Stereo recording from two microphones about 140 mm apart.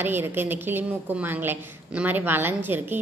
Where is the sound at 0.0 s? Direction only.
15° right (ahead or behind).